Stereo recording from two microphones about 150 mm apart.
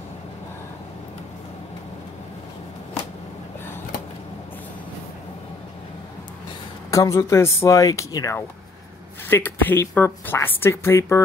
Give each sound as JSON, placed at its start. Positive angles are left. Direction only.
{"t": 6.9, "sound": "speech", "side_deg": 20}